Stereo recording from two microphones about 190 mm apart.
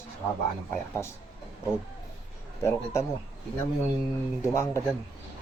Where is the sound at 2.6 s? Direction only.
15° left (ahead or behind).